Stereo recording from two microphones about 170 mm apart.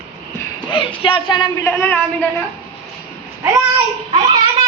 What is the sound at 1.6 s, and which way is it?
Speech, 10° left (ahead or behind).